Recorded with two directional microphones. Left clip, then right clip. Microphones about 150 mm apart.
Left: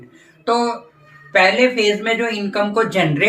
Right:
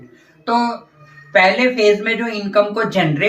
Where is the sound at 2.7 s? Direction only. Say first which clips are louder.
Left 1 dB; 35° left (ahead or behind).